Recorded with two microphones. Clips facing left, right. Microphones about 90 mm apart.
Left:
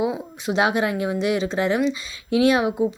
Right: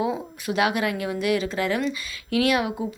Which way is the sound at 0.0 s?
20° left (ahead or behind).